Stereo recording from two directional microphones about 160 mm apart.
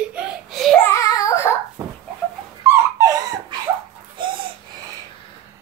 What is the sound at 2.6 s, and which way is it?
Dog, 20° right (ahead or behind).